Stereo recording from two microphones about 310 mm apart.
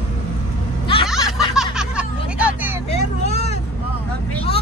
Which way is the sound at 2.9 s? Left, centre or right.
Left.